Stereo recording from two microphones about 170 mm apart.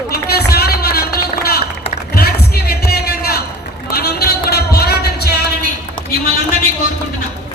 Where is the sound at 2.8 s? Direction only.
65° left (ahead or behind).